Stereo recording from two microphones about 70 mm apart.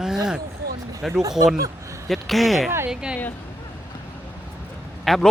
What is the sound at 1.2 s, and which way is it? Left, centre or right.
Speech, right.